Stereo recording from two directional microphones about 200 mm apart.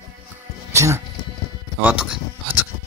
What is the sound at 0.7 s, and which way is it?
Music, 15° right (ahead or behind).